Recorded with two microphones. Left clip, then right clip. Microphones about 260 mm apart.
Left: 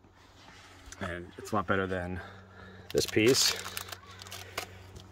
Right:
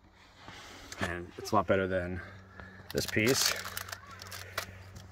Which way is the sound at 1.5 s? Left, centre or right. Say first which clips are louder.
Right 3 dB; centre.